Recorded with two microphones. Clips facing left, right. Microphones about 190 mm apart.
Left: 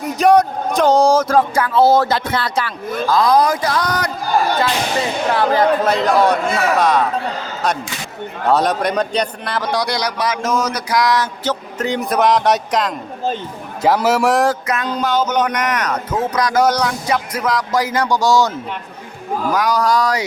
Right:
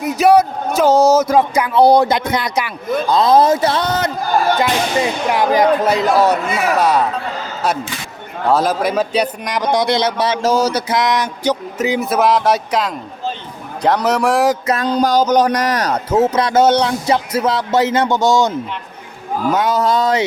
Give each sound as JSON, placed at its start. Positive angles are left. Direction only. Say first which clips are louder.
{"t": 0.0, "sound": "a man's voice", "louder": "right 1 dB", "side_deg": -5}
{"t": 0.9, "sound": "speech", "louder": "right 2 dB", "side_deg": 15}
{"t": 1.2, "sound": "speech", "louder": "right 1 dB", "side_deg": -10}
{"t": 5.3, "sound": "speech", "louder": "right 1 dB", "side_deg": -15}
{"t": 8.4, "sound": "a man's voice", "louder": "right 1 dB", "side_deg": 0}
{"t": 14.7, "sound": "a man's voice", "louder": "right 4 dB", "side_deg": -35}
{"t": 19.5, "sound": "a man's voice", "louder": "even", "side_deg": -25}